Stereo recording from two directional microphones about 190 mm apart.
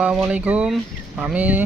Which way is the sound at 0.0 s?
5° right (ahead or behind).